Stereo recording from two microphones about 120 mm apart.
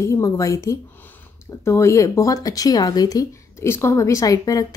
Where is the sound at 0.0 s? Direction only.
25° left (ahead or behind).